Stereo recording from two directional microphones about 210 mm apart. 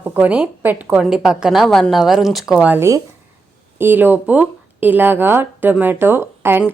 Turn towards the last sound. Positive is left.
turn(degrees=-10)  # may be behind; listen again after turning